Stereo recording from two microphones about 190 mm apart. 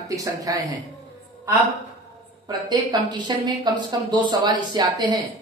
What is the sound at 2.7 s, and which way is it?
Speech, 20° right (ahead or behind).